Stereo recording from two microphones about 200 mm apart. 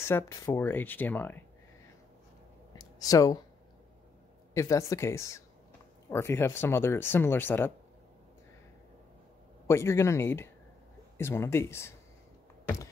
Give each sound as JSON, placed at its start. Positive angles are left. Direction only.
{"t": 0.1, "sound": "speech", "side_deg": 10}
{"t": 2.7, "sound": "a sound", "side_deg": 20}
{"t": 4.6, "sound": "speech", "side_deg": 15}
{"t": 9.7, "sound": "speech", "side_deg": 15}